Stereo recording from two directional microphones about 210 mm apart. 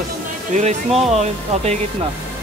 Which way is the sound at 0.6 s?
35° right (ahead or behind).